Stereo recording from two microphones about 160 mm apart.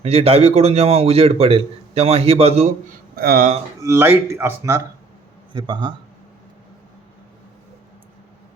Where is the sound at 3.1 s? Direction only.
70° right (ahead or behind).